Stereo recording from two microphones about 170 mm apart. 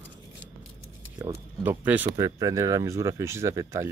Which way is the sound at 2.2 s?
20° right (ahead or behind).